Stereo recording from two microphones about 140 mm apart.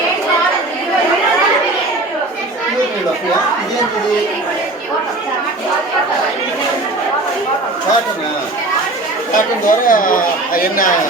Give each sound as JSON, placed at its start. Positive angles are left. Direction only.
{"t": 9.6, "sound": "speech", "side_deg": 75}